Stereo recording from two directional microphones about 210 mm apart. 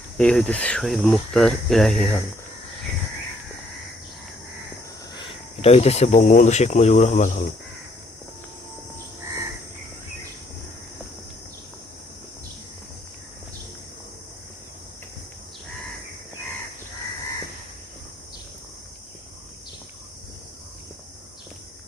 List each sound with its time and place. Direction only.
0.2 s speech: 5° left (ahead or behind)
5.1 s speech: 25° left (ahead or behind)